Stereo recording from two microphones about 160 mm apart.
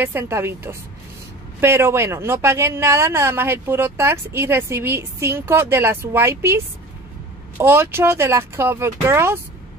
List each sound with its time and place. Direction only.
0.0 s a woman's voice: 15° right (ahead or behind)